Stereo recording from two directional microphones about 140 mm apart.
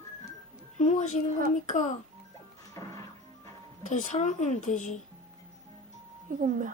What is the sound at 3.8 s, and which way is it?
Speech, 65° left (ahead or behind).